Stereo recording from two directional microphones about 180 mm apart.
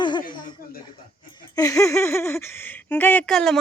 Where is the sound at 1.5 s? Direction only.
20° left (ahead or behind).